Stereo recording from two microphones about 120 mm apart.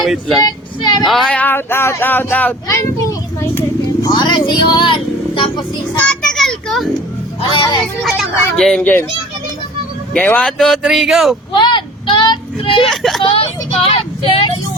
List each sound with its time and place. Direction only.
0.0 s speech: centre (ahead or behind)
0.4 s speech: 35° left (ahead or behind)
1.0 s a child's voice: 5° left (ahead or behind); by 3.6 s 25° left (ahead or behind)
4.0 s speech: 35° left (ahead or behind)
6.0 s children playing: 5° left (ahead or behind)
7.4 s speech: 45° left (ahead or behind)
8.0 s speech: centre (ahead or behind)
10.2 s speech: 10° left (ahead or behind)
11.5 s a sound: 40° left (ahead or behind)
12.7 s speech: centre (ahead or behind)
13.2 s speech: 50° left (ahead or behind)